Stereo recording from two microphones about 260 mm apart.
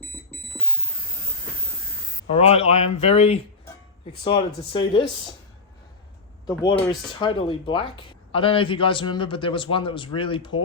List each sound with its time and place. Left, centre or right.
2.2 s speech: left
6.5 s speech: centre